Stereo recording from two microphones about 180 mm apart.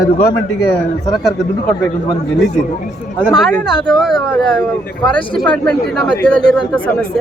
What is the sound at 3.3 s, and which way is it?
Speech, centre (ahead or behind).